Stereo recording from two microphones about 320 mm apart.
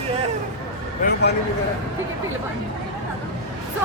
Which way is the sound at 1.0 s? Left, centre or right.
Left.